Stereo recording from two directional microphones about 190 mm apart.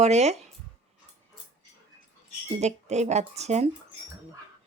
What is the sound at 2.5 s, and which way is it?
Speech, 35° right (ahead or behind).